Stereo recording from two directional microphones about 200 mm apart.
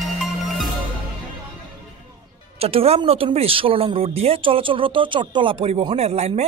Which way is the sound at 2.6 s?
30° right (ahead or behind).